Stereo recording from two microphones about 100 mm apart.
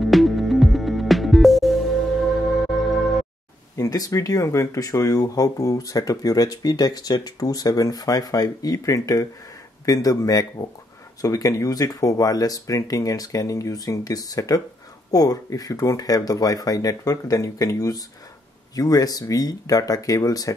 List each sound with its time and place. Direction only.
0.0 s music: centre (ahead or behind)
3.7 s speech: 40° left (ahead or behind)